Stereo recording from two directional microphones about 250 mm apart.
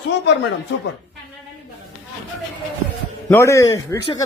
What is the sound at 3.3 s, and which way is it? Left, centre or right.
Speech, centre.